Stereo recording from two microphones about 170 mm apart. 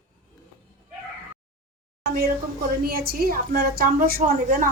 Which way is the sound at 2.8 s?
65° right (ahead or behind).